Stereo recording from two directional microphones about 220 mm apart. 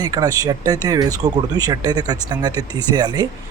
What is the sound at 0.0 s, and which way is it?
Speech, 15° right (ahead or behind).